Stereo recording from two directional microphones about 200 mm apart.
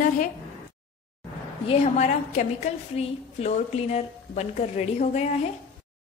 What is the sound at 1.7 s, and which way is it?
A woman's voice, 35° left (ahead or behind).